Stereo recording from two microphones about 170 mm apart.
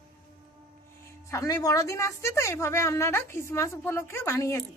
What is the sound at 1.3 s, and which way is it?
A woman's voice, 20° left (ahead or behind).